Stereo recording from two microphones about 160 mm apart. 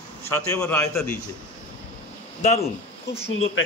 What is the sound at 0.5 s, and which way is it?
Speech, 15° left (ahead or behind).